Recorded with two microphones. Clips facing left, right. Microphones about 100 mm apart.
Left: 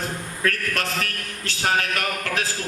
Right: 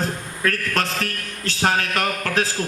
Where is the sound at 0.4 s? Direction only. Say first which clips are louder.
Right 3 dB; 35° right (ahead or behind).